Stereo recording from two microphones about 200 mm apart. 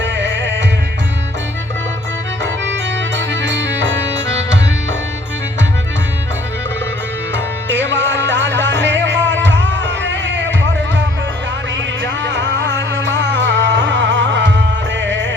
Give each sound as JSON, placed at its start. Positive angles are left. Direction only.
{"t": 0.0, "sound": "music", "side_deg": -65}
{"t": 3.2, "sound": "music", "side_deg": -65}
{"t": 7.3, "sound": "music", "side_deg": -65}
{"t": 12.2, "sound": "music", "side_deg": -65}